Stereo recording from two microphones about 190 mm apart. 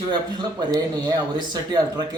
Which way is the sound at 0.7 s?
20° right (ahead or behind).